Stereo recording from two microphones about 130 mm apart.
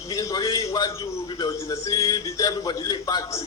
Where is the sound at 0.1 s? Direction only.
30° left (ahead or behind).